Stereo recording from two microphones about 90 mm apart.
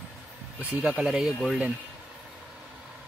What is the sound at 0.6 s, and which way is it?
Speech, 15° right (ahead or behind).